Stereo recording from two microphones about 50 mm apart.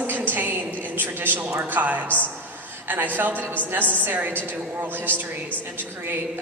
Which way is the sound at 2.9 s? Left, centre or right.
Right.